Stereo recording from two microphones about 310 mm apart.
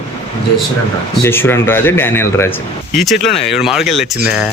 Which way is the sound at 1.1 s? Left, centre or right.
Centre.